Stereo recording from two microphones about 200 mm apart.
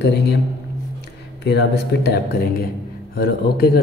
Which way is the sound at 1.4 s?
55° left (ahead or behind).